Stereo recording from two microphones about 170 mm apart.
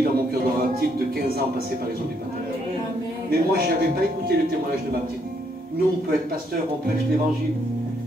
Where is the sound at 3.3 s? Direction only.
60° right (ahead or behind).